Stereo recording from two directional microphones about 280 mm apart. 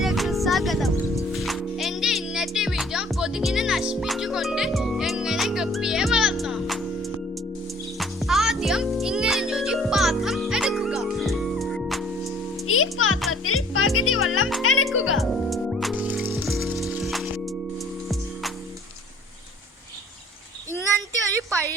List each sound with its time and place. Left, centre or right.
0.0 s music: centre
12.6 s music: left
15.2 s music: centre